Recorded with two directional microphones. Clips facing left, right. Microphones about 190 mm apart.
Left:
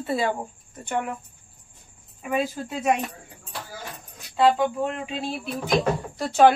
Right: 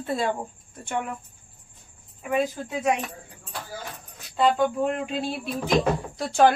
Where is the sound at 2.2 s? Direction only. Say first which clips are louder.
Right 1 dB; centre (ahead or behind).